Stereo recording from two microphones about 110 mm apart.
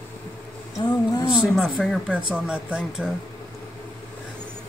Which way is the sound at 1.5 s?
5° left (ahead or behind).